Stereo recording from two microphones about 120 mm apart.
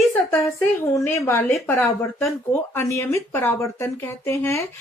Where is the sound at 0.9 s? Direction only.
20° left (ahead or behind).